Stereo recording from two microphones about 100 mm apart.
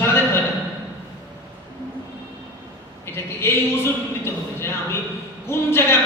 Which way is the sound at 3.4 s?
25° left (ahead or behind).